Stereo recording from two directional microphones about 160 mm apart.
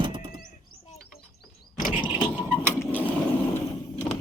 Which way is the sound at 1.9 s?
10° right (ahead or behind).